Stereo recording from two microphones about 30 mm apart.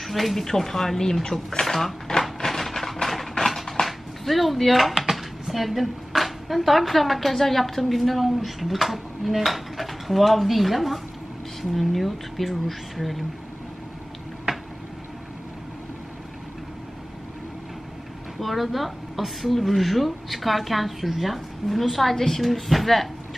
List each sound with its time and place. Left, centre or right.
0.0 s speech: centre
2.4 s a sound: centre
3.8 s dishes: centre
5.5 s a woman's voice: centre
14.5 s a sound: right
18.4 s a woman's voice: centre